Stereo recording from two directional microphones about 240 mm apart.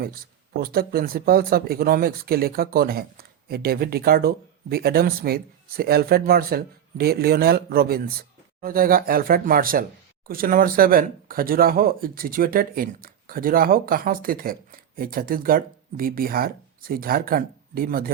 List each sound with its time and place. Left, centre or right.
0.0 s speech: right